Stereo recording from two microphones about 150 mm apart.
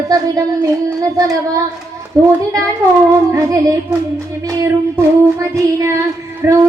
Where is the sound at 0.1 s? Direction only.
25° right (ahead or behind).